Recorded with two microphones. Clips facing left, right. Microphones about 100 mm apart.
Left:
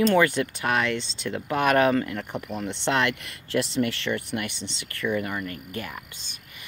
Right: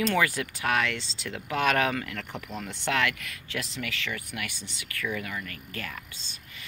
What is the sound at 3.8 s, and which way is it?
Speech, 35° left (ahead or behind).